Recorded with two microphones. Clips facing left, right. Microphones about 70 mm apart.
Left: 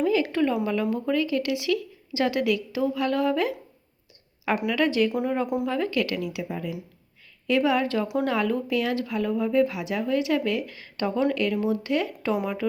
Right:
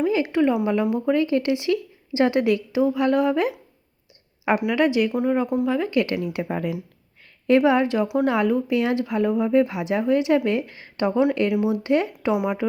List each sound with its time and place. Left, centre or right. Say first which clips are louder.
0.0 s speech: right 3 dB; right
4.7 s speech: right 1 dB; centre
5.1 s speech: right 4 dB; centre
5.6 s speech: right 3 dB; centre
5.9 s speech: right 4 dB; right
6.2 s speech: right 5 dB; right
7.4 s speech: right 5 dB; right
8.0 s speech: right 4 dB; centre
8.3 s speech: right 4 dB; centre
12.3 s speech: right 4 dB; centre